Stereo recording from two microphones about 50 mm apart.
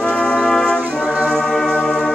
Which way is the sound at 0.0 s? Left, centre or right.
Centre.